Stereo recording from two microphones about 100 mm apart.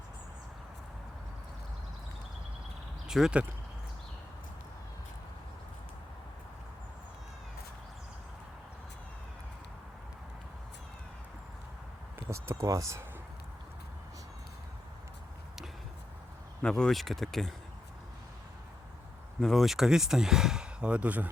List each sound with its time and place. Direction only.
3.1 s speech: 5° right (ahead or behind)
12.3 s speech: 30° right (ahead or behind)
16.6 s speech: 5° left (ahead or behind)
19.4 s speech: centre (ahead or behind); by 21.2 s 15° right (ahead or behind)